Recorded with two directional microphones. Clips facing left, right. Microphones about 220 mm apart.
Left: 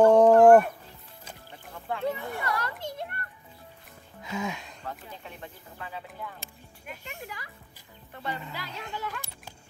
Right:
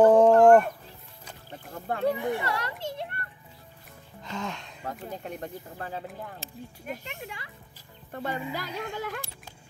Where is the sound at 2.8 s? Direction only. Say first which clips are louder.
Right 2 dB; 25° right (ahead or behind).